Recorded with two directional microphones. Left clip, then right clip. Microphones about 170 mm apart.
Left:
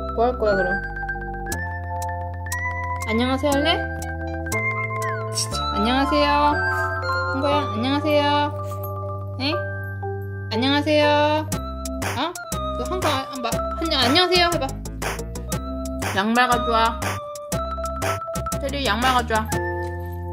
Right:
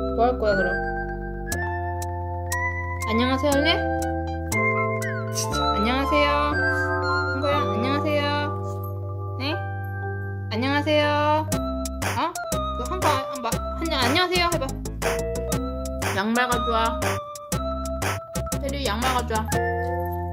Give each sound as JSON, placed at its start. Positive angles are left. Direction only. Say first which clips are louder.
{"t": 0.2, "sound": "speech", "louder": "left 2 dB", "side_deg": 15}
{"t": 2.5, "sound": "music", "louder": "left 2 dB", "side_deg": 5}
{"t": 5.8, "sound": "music", "louder": "left 4 dB", "side_deg": 20}
{"t": 6.6, "sound": "music", "louder": "even", "side_deg": 0}
{"t": 7.7, "sound": "music", "louder": "left 3 dB", "side_deg": 20}
{"t": 10.5, "sound": "music", "louder": "left 3 dB", "side_deg": 15}
{"t": 13.0, "sound": "music", "louder": "right 1 dB", "side_deg": 0}
{"t": 13.7, "sound": "a child's voice", "louder": "left 3 dB", "side_deg": 20}
{"t": 15.0, "sound": "music", "louder": "right 5 dB", "side_deg": 0}
{"t": 16.2, "sound": "music", "louder": "left 5 dB", "side_deg": 20}
{"t": 17.0, "sound": "music", "louder": "even", "side_deg": 0}
{"t": 18.6, "sound": "music", "louder": "left 4 dB", "side_deg": 20}
{"t": 19.5, "sound": "music", "louder": "right 1 dB", "side_deg": 0}